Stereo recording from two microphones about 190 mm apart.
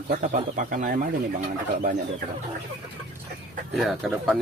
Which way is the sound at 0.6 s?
45° right (ahead or behind).